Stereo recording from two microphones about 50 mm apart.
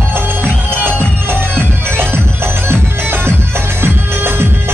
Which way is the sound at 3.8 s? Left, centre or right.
Right.